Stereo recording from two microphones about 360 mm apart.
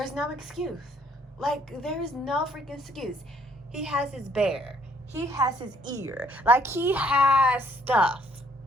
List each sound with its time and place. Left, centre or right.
0.0 s a woman's voice: centre